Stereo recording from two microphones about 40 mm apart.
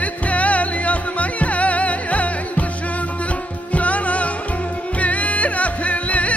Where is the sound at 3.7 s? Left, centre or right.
Left.